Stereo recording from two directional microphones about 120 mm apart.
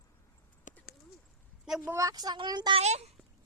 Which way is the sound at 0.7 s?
90° left.